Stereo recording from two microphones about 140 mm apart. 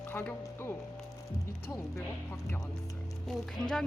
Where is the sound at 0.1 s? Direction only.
15° left (ahead or behind).